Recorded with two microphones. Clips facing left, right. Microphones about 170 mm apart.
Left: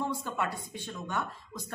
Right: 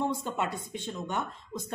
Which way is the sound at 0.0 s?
20° right (ahead or behind).